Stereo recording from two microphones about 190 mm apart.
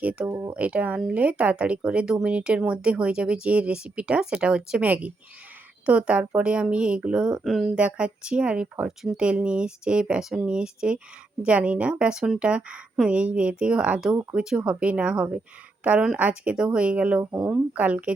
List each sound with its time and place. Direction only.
0.0 s a woman's voice: 5° right (ahead or behind)